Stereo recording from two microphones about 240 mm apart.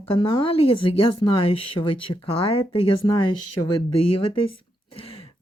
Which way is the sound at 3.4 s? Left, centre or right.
Left.